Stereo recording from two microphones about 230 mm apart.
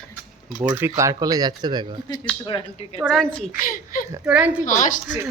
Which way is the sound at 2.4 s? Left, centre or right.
Left.